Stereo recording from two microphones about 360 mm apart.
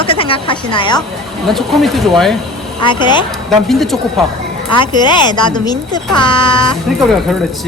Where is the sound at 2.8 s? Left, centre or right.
Centre.